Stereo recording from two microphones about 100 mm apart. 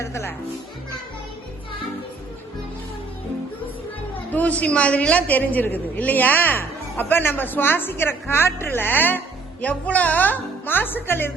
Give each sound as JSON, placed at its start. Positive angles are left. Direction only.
{"t": 0.0, "sound": "speech", "side_deg": 25}
{"t": 4.3, "sound": "a man's voice", "side_deg": 15}